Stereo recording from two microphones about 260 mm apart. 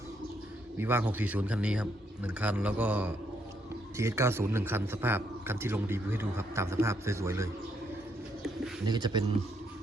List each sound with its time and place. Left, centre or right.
0.8 s a man's voice: centre
8.9 s a man's voice: centre